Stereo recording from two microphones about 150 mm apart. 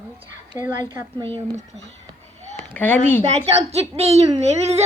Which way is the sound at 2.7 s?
10° left (ahead or behind).